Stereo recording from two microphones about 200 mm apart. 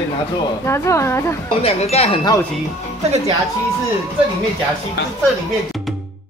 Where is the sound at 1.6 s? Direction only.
30° left (ahead or behind).